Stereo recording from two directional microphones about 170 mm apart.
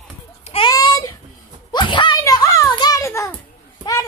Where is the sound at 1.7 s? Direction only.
25° left (ahead or behind).